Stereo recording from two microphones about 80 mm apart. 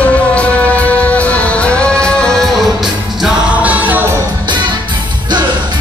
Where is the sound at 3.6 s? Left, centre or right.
Centre.